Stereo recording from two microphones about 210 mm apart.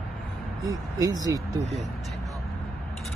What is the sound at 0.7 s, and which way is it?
Speech, 15° right (ahead or behind).